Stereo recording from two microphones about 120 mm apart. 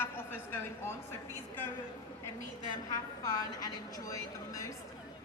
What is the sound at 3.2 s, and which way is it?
A woman's voice, 30° left (ahead or behind).